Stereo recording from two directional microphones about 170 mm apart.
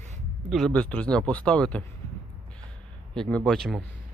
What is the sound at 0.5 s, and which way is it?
Speech, 5° left (ahead or behind).